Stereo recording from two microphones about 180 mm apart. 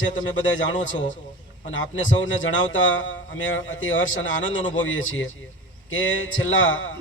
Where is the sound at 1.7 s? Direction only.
90° left.